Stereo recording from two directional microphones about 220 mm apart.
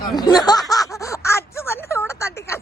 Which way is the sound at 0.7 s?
15° left (ahead or behind).